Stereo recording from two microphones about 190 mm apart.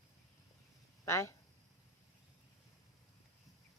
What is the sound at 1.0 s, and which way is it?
Speech, 15° left (ahead or behind).